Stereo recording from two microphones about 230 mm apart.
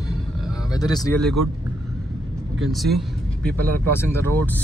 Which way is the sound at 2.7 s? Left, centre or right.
Centre.